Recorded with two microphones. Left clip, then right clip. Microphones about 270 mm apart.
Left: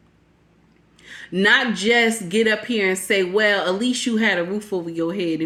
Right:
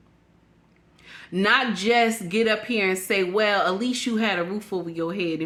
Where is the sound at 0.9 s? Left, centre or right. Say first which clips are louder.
Left 4 dB; centre.